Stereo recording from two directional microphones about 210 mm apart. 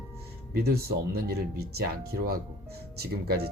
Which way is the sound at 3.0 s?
50° right (ahead or behind).